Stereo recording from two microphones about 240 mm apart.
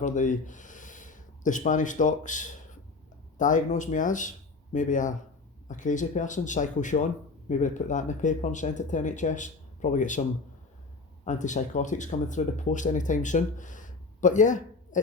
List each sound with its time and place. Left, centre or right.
0.0 s speech: left
11.3 s speech: left